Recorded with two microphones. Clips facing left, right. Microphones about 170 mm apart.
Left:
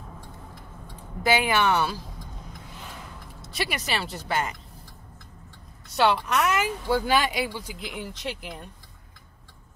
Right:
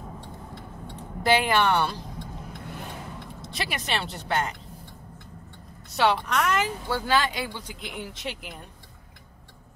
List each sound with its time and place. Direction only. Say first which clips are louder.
0.2 s vehicle: right 4 dB; 75° right (ahead or behind)
1.2 s speech: right 1 dB; 5° left (ahead or behind)
3.4 s speech: left 2 dB; centre (ahead or behind)
5.9 s speech: left 1 dB; centre (ahead or behind)